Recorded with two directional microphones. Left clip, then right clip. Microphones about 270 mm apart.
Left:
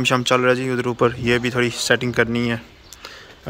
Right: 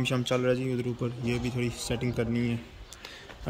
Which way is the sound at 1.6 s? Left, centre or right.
Centre.